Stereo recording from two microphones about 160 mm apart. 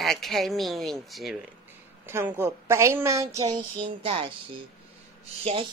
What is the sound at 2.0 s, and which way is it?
A woman's voice, 15° right (ahead or behind).